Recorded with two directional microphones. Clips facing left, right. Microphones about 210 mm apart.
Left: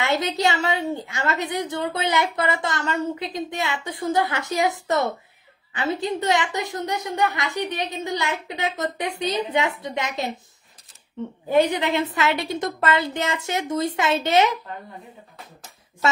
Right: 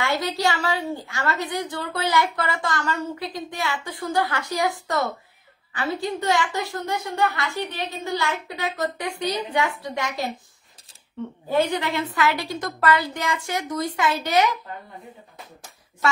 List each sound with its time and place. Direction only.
0.0 s a woman's voice: 20° left (ahead or behind)
11.4 s a woman's voice: 15° left (ahead or behind)